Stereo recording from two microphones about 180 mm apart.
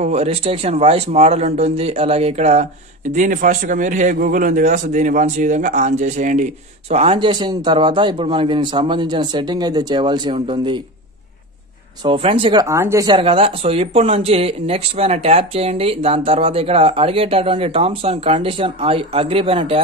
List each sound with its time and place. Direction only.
0.0 s a man's voice: 35° right (ahead or behind)
12.0 s speech: 30° right (ahead or behind)
12.6 s a man's voice: 15° right (ahead or behind)